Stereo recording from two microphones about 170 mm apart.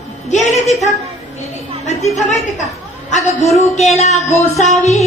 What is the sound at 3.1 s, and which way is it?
A woman's voice, 45° left (ahead or behind).